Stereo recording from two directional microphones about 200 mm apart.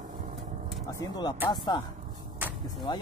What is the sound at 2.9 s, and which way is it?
Speech, 20° left (ahead or behind).